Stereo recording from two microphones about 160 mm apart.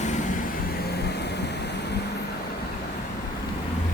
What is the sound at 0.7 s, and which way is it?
Vehicle, 85° left.